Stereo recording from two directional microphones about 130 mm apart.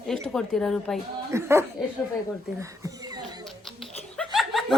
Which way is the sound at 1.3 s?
20° right (ahead or behind).